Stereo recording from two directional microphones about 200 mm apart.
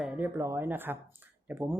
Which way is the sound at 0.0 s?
10° right (ahead or behind).